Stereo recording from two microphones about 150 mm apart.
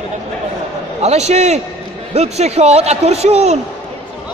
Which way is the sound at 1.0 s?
45° right (ahead or behind).